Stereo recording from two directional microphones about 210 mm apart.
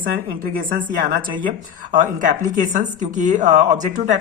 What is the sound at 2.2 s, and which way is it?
Speech, 40° right (ahead or behind).